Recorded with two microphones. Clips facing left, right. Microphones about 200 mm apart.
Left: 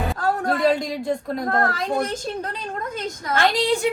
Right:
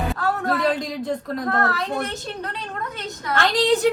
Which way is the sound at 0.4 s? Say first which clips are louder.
Left 3 dB; 30° left (ahead or behind).